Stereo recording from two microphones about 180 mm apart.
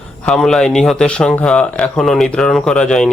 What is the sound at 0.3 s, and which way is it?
Speech, 5° left (ahead or behind).